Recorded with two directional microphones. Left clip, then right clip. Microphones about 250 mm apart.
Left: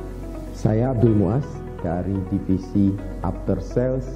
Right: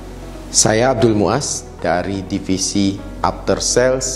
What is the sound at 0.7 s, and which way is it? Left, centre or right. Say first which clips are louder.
Speech: right 6 dB; centre.